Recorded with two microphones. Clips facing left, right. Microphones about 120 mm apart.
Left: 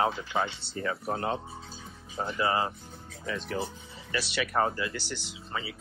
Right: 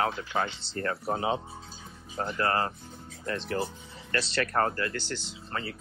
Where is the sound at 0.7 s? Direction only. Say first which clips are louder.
Right 2 dB; centre (ahead or behind).